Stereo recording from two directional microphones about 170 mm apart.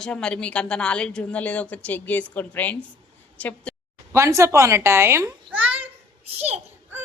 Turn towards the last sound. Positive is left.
turn(degrees=-35)  # may be behind; listen again after turning